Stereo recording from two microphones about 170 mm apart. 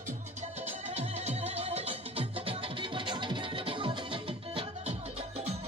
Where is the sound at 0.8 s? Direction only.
40° right (ahead or behind).